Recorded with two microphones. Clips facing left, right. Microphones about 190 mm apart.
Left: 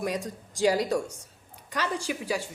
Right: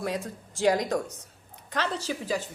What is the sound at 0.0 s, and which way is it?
A woman's voice, 15° left (ahead or behind).